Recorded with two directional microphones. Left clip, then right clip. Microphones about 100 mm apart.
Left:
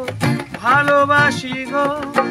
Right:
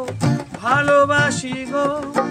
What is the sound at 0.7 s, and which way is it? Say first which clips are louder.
Music: left 2 dB; 20° right (ahead or behind).